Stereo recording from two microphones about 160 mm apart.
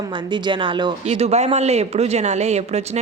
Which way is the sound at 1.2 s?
40° right (ahead or behind).